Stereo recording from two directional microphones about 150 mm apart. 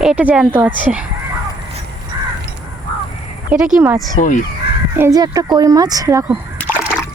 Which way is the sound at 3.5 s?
5° right (ahead or behind).